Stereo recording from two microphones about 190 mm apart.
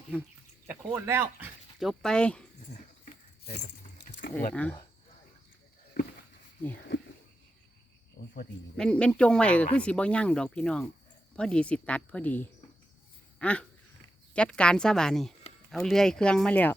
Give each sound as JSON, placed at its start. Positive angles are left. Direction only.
{"t": 0.7, "sound": "speech", "side_deg": -10}
{"t": 1.8, "sound": "speech", "side_deg": 0}
{"t": 3.0, "sound": "keys jangling", "side_deg": 40}
{"t": 3.9, "sound": "keys jangling", "side_deg": 55}
{"t": 4.5, "sound": "speech", "side_deg": 5}
{"t": 6.9, "sound": "a sound", "side_deg": 75}
{"t": 8.2, "sound": "cricket", "side_deg": 45}
{"t": 8.7, "sound": "speech", "side_deg": 5}